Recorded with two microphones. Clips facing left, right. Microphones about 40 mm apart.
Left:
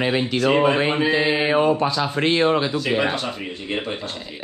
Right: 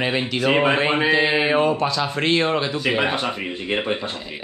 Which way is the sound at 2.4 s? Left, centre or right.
Centre.